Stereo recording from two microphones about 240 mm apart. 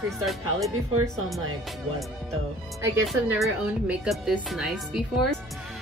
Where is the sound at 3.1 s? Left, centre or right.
Centre.